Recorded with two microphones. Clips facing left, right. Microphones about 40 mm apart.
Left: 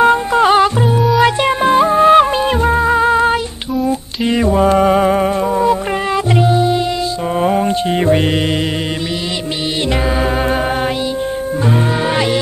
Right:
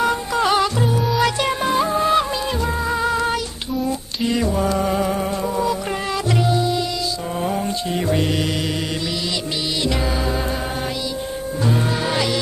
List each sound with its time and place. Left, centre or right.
0.0 s music: left
7.3 s mantra: left
11.6 s music: left